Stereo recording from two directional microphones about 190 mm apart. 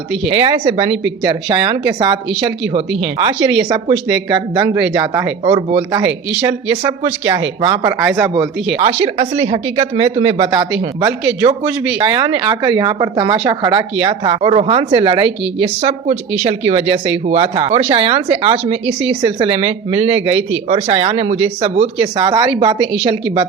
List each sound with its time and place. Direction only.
0.3 s speech: 30° right (ahead or behind)
3.2 s speech: 25° right (ahead or behind)
6.0 s speech: 15° right (ahead or behind)
8.8 s speech: 30° right (ahead or behind)
12.5 s speech: 20° right (ahead or behind)